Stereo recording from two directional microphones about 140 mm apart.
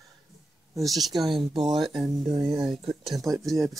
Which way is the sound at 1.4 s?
35° right (ahead or behind).